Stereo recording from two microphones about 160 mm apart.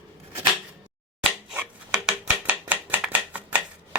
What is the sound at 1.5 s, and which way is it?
Chopping, 5° right (ahead or behind).